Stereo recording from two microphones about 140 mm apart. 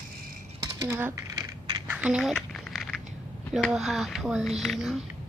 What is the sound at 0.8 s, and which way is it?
Speech, 15° right (ahead or behind).